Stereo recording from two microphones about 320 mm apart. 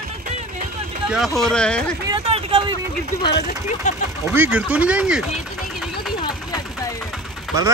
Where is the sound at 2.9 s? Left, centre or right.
Left.